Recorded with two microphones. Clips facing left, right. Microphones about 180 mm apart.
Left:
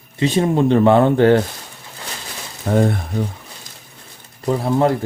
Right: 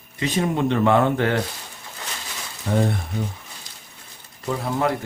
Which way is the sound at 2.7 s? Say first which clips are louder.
Left 5 dB; 50° left (ahead or behind).